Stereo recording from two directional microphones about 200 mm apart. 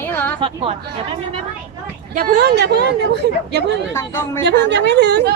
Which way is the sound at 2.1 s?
55° right (ahead or behind).